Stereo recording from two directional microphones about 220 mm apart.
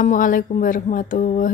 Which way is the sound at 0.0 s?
35° left (ahead or behind).